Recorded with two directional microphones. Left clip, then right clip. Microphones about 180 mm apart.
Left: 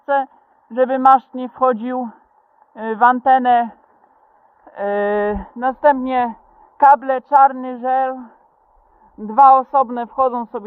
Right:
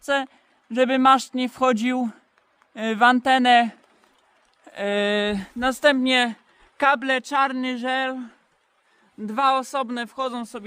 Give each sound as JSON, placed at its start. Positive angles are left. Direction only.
{"t": 0.0, "sound": "a woman's voice", "side_deg": -25}